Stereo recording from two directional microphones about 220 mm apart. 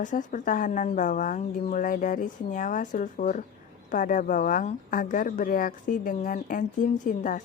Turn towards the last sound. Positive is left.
turn(degrees=35)  # may be behind; listen again after turning